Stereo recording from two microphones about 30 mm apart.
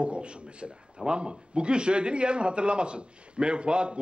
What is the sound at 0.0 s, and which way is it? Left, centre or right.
A man's voice, right.